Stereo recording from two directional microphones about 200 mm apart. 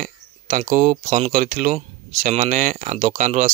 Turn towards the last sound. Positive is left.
turn(degrees=-35)  # may be behind; listen again after turning